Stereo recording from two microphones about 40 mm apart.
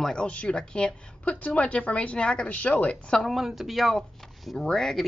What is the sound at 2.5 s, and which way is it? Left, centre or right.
Speech, left.